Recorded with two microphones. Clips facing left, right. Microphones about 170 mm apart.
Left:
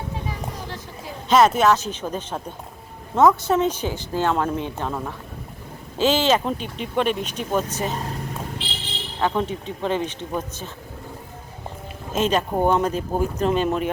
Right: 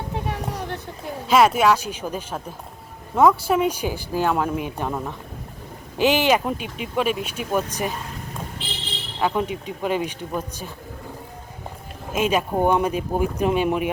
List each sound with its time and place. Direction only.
0.1 s a sound: 70° right (ahead or behind)
1.3 s speech: 10° right (ahead or behind)
9.2 s speech: 10° right (ahead or behind)
12.1 s speech: 10° right (ahead or behind)